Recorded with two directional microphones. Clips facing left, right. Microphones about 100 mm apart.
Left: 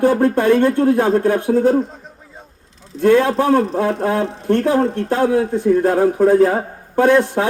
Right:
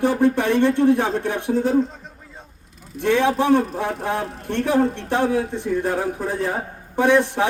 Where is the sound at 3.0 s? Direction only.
45° left (ahead or behind).